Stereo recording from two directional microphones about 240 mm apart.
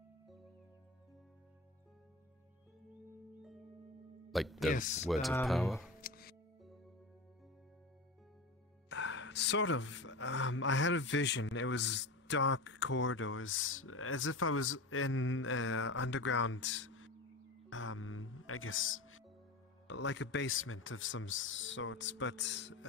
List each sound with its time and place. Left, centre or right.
4.3 s speech: centre
4.7 s speech: left
5.0 s a sound: centre
5.9 s music: left
8.8 s speech: left